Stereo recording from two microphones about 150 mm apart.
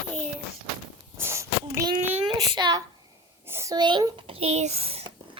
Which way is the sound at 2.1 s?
30° right (ahead or behind).